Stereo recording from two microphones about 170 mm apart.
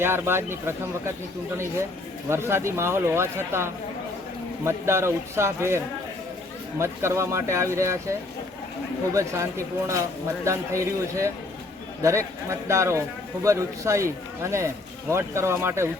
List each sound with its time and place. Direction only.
0.0 s speech: 15° right (ahead or behind)
9.1 s speech: 15° right (ahead or behind)
15.1 s speech: 15° right (ahead or behind)